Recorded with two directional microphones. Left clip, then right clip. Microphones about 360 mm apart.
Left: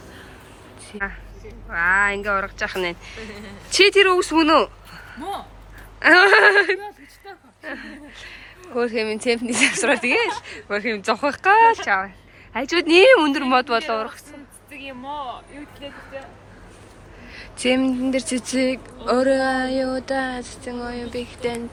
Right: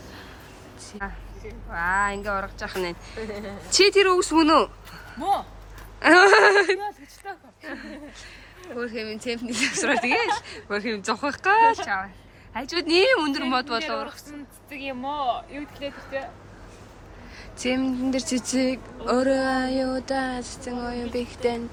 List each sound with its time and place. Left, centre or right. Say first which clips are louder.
0.9 s speech: left 7 dB; centre
3.2 s speech: right 3 dB; right
3.7 s speech: left 3 dB; centre
14.7 s speech: right 2 dB; right
17.3 s speech: left 6 dB; centre